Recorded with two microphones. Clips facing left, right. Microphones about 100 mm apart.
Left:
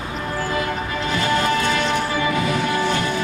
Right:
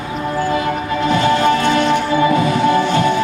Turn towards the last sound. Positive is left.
turn(degrees=-40)  # may be behind; listen again after turning